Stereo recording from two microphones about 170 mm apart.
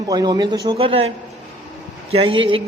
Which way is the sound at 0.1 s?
25° right (ahead or behind).